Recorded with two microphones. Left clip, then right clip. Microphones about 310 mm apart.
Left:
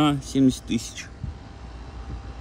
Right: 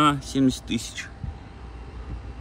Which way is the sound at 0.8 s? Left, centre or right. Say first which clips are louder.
Right 2 dB; centre.